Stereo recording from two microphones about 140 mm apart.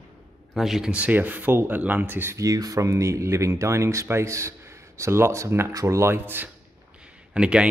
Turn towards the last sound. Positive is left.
turn(degrees=-5)  # may be behind; listen again after turning